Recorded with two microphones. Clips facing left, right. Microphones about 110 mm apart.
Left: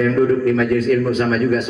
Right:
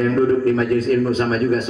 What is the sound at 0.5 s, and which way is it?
A man's voice, 35° right (ahead or behind).